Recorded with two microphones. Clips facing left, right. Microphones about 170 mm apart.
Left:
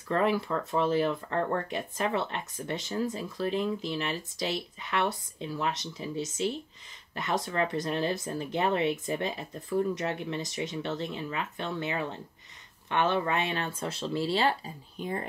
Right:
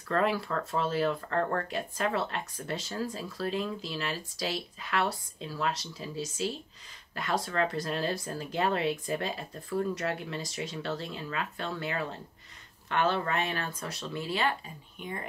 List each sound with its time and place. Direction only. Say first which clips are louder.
0.1 s speech: left 2 dB; 20° left (ahead or behind); by 15.2 s 35° left (ahead or behind)